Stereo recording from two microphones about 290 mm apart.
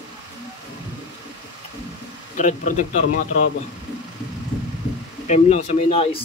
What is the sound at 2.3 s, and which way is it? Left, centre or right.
Speech, left.